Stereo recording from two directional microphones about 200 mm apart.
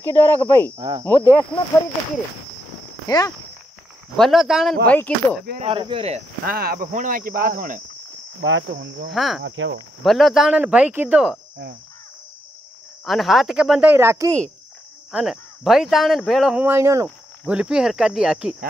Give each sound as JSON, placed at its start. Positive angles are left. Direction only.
{"t": 0.0, "sound": "speech", "side_deg": 10}
{"t": 0.7, "sound": "speech", "side_deg": -20}
{"t": 1.0, "sound": "speech", "side_deg": 10}
{"t": 3.1, "sound": "speech", "side_deg": 20}
{"t": 4.2, "sound": "speech", "side_deg": 0}
{"t": 5.6, "sound": "speech", "side_deg": -25}
{"t": 6.4, "sound": "speech", "side_deg": -50}
{"t": 8.4, "sound": "cricket", "side_deg": -65}
{"t": 9.1, "sound": "speech", "side_deg": 0}
{"t": 9.4, "sound": "cricket", "side_deg": -65}
{"t": 10.0, "sound": "speech", "side_deg": 0}
{"t": 13.0, "sound": "speech", "side_deg": 0}
{"t": 15.0, "sound": "speech", "side_deg": 0}